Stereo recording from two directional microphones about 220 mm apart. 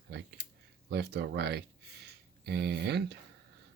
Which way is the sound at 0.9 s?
45° right (ahead or behind).